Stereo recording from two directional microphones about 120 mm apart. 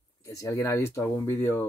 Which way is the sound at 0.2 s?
25° left (ahead or behind).